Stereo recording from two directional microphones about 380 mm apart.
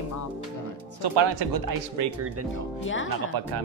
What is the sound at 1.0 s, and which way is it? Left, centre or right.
Speech, right.